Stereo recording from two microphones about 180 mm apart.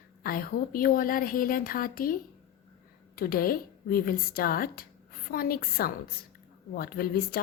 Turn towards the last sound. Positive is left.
turn(degrees=55)  # may be behind; listen again after turning